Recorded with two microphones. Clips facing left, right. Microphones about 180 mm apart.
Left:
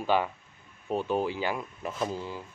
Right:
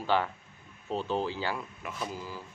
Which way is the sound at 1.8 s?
25° left (ahead or behind).